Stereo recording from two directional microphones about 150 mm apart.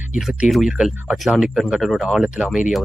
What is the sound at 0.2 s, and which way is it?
Speech, centre (ahead or behind).